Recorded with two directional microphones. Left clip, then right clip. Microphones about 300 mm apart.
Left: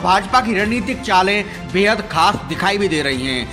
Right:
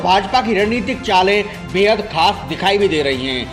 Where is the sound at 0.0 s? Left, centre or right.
Left.